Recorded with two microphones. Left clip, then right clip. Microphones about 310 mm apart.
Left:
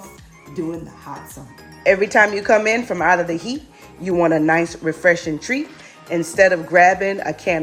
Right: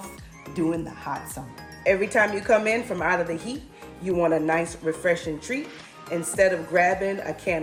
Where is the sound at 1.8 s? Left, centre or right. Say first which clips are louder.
Left 7 dB; left.